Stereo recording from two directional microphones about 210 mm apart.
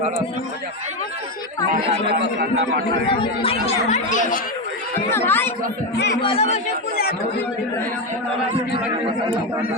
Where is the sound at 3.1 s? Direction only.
25° left (ahead or behind).